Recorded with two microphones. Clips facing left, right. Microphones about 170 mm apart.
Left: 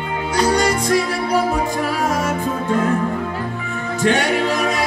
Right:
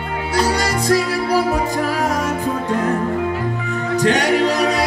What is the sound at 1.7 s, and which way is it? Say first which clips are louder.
Music: right 1 dB; 40° right (ahead or behind).